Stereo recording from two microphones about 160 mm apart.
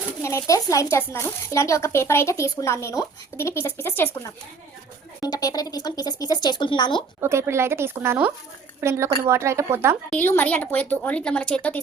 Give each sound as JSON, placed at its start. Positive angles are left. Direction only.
{"t": 0.2, "sound": "speech", "side_deg": 20}
{"t": 7.2, "sound": "a woman's voice", "side_deg": -15}
{"t": 10.1, "sound": "speech", "side_deg": 10}